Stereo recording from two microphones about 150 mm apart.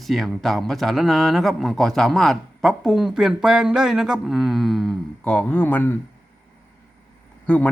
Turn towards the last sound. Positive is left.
turn(degrees=10)  # may be behind; listen again after turning